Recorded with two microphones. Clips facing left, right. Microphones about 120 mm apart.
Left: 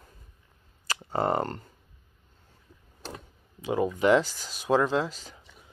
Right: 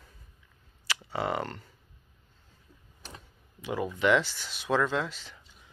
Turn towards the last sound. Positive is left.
turn(degrees=40)  # may be behind; listen again after turning